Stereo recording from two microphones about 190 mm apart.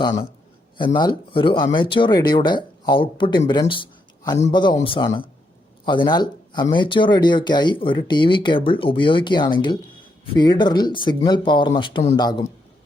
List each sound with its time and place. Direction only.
0.9 s speech: 25° left (ahead or behind)